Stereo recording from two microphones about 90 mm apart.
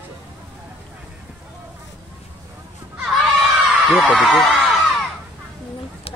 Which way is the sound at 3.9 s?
15° left (ahead or behind).